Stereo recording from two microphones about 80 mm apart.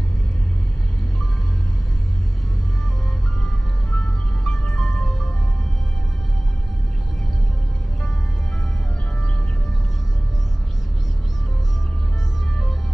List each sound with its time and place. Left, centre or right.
3.9 s music: centre